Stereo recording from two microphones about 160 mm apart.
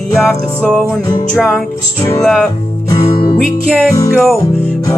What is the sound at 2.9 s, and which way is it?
Music, 35° left (ahead or behind).